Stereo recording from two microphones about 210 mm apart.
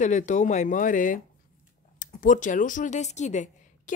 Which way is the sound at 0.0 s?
35° left (ahead or behind).